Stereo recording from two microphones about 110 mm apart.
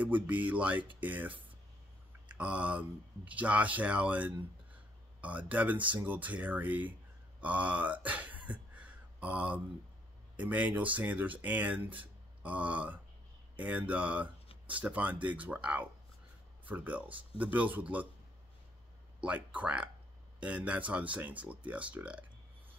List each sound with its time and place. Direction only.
0.0 s speech: 15° right (ahead or behind)
2.2 s a sound: 10° right (ahead or behind)
3.3 s speech: 10° right (ahead or behind)
19.2 s speech: 15° right (ahead or behind)